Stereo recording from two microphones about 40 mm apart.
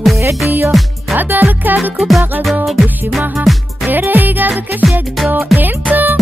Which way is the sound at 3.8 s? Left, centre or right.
Right.